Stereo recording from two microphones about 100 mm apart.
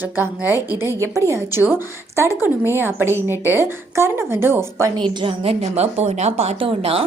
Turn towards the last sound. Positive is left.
turn(degrees=-70)  # may be behind; listen again after turning